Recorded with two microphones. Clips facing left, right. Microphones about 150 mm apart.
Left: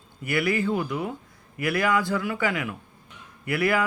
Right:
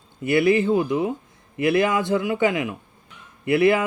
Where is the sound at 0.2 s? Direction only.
25° right (ahead or behind).